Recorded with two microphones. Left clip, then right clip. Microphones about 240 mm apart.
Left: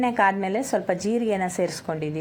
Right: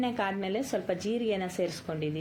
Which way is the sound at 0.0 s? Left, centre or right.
Left.